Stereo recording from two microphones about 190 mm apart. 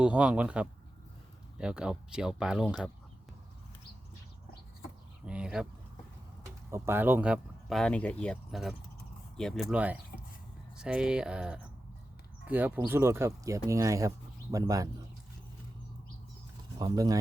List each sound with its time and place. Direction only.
0.0 s speech: 5° right (ahead or behind)
5.2 s speech: 5° right (ahead or behind)
6.7 s speech: 15° right (ahead or behind)
16.7 s speech: 20° right (ahead or behind)